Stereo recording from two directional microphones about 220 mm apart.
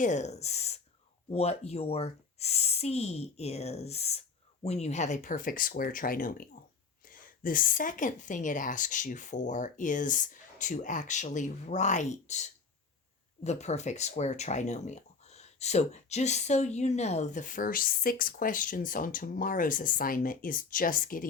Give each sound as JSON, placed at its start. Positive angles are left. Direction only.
{"t": 0.0, "sound": "speech", "side_deg": 30}